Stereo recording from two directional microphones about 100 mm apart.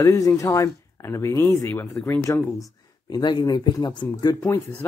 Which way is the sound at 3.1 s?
45° left (ahead or behind).